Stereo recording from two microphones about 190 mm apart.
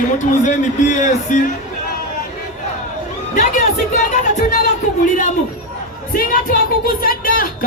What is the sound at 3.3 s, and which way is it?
Music, 40° left (ahead or behind).